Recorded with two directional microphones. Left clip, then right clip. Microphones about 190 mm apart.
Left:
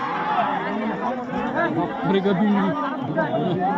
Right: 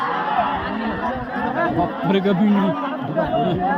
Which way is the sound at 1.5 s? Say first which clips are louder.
Right 2 dB; 55° right (ahead or behind).